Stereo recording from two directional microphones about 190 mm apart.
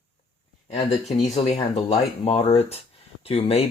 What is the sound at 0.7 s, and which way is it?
Speech, 35° left (ahead or behind).